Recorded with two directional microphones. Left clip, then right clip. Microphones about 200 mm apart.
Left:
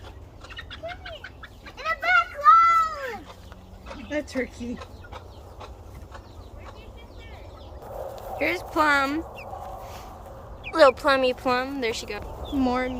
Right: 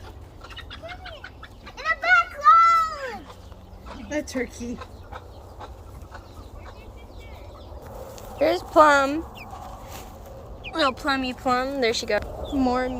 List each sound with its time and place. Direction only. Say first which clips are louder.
0.5 s bird: left 2 dB; 30° right (ahead or behind)
1.7 s children playing: right 2 dB; 65° right (ahead or behind)
4.1 s speech: right 1 dB; 45° right (ahead or behind)
8.4 s speech: right 7 dB; centre (ahead or behind)
10.7 s speech: left 6 dB; 15° left (ahead or behind)
11.8 s speech: right 6 dB; 10° right (ahead or behind)
12.4 s speech: right 2 dB; 10° left (ahead or behind)